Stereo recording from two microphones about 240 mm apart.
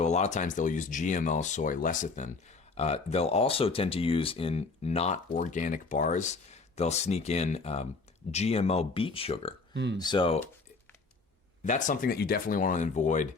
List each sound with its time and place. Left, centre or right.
0.0 s speech: left
9.7 s speech: right
10.0 s speech: centre
11.6 s speech: left